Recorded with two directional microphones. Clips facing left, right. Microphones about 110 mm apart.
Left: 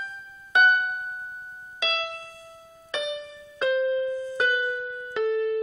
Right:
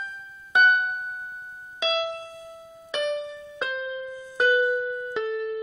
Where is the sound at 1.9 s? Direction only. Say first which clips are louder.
Right 6 dB; 15° right (ahead or behind).